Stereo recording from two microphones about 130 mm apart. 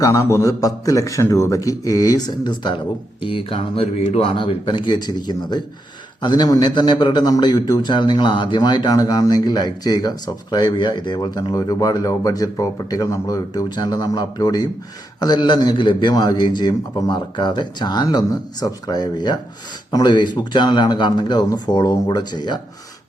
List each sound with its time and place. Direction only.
0.0 s a man's voice: 20° left (ahead or behind)